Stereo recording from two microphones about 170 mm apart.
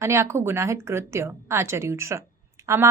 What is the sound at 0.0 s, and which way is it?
Speech, 15° right (ahead or behind).